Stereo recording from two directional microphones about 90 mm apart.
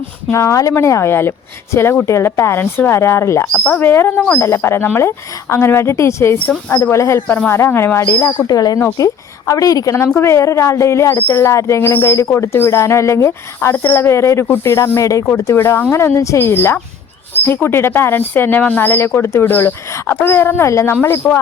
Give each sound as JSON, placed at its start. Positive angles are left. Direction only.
{"t": 0.3, "sound": "speech", "side_deg": 35}
{"t": 3.4, "sound": "speech", "side_deg": 10}
{"t": 6.4, "sound": "a woman's voice", "side_deg": 15}
{"t": 6.9, "sound": "a woman's voice", "side_deg": 30}
{"t": 8.4, "sound": "speech", "side_deg": 45}
{"t": 10.2, "sound": "speech", "side_deg": 30}